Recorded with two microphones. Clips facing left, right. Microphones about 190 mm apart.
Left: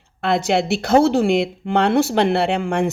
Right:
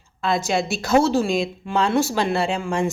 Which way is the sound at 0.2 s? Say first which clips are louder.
Left 3 dB; 60° left (ahead or behind).